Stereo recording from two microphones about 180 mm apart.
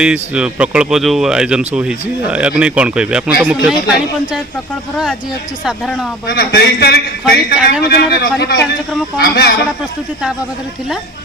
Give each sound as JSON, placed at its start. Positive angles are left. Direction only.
{"t": 0.0, "sound": "speech", "side_deg": -5}
{"t": 5.6, "sound": "speech", "side_deg": 0}
{"t": 6.2, "sound": "a man's voice", "side_deg": 60}